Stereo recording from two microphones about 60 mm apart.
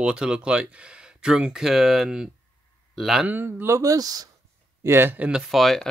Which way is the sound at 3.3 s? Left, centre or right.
Right.